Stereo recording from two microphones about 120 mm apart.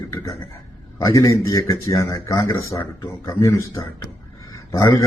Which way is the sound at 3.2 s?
25° left (ahead or behind).